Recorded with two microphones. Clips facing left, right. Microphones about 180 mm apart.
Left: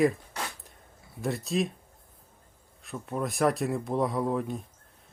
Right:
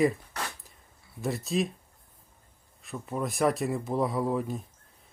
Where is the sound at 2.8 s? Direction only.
Centre (ahead or behind).